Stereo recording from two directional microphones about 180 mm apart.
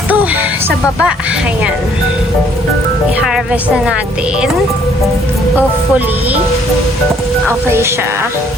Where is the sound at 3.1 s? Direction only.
5° right (ahead or behind).